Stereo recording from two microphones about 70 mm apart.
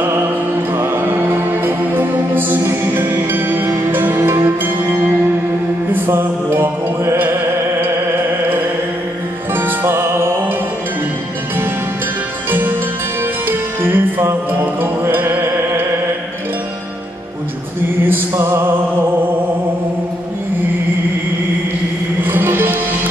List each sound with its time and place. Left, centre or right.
0.0 s music: right
9.6 s music: right
12.4 s music: right
18.0 s music: right
22.2 s music: right